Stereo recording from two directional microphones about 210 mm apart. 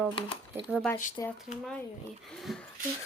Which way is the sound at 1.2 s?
20° left (ahead or behind).